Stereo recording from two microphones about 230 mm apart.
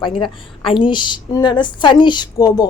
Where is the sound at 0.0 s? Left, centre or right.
Left.